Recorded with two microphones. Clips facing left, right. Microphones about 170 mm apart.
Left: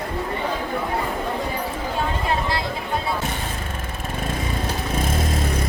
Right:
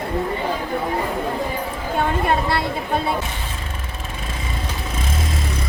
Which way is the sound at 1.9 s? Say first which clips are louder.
Right 5 dB; 60° right (ahead or behind).